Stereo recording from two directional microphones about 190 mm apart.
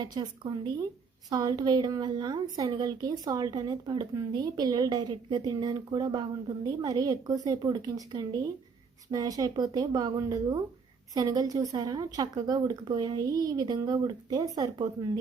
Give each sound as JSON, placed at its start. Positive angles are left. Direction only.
{"t": 0.0, "sound": "a woman's voice", "side_deg": -20}